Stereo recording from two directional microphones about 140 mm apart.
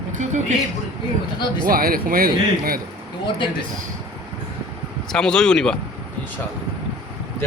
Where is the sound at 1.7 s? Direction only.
90° right.